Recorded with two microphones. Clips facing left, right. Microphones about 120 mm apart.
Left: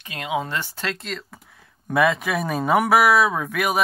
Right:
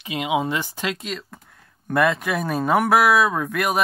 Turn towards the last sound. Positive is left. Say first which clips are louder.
# right 1 dB
turn(degrees=0)  # may be behind; listen again after turning